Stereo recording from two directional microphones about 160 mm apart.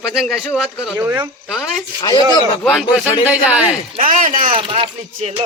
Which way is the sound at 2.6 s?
Centre (ahead or behind).